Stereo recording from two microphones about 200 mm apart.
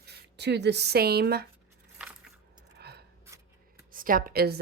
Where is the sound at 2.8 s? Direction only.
55° right (ahead or behind).